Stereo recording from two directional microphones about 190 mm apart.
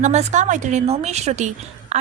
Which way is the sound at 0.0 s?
35° right (ahead or behind).